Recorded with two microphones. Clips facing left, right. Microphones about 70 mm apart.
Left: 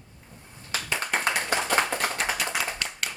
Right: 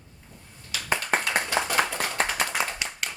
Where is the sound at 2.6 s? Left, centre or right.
Right.